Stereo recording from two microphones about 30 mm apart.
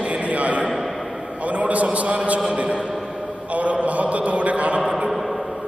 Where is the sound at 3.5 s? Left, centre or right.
Right.